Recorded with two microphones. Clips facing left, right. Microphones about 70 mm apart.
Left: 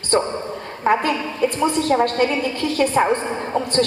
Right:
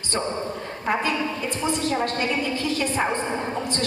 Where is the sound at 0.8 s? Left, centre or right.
Left.